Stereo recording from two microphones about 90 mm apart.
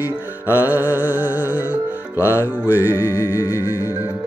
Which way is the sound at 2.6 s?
20° right (ahead or behind).